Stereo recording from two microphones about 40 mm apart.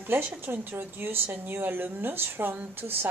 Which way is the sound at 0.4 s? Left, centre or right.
Right.